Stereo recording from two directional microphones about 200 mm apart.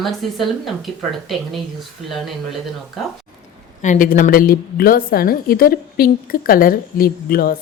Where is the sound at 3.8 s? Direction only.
40° left (ahead or behind).